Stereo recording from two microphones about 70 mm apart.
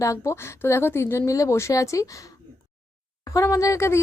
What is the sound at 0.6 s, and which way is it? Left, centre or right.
Speech, left.